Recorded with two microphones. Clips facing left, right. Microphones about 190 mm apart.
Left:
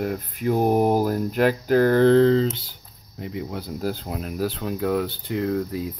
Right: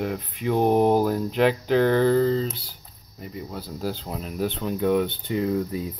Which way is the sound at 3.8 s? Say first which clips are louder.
Left 2 dB; 50° left (ahead or behind).